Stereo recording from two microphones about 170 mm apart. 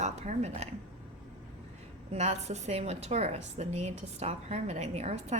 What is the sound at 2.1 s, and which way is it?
A woman's voice, 40° right (ahead or behind).